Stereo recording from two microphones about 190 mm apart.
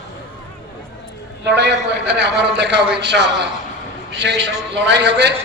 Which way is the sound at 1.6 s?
65° right (ahead or behind).